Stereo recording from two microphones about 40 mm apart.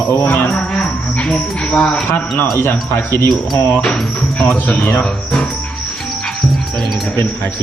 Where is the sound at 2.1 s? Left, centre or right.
Left.